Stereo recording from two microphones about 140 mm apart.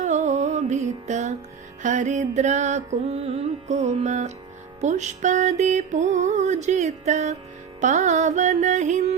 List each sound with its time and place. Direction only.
0.0 s music: 55° right (ahead or behind)